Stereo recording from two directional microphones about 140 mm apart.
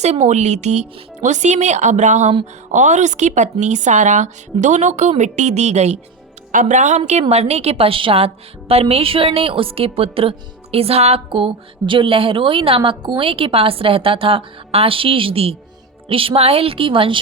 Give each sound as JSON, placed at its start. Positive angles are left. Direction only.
{"t": 0.0, "sound": "a woman's voice", "side_deg": -55}
{"t": 6.5, "sound": "a woman's voice", "side_deg": -65}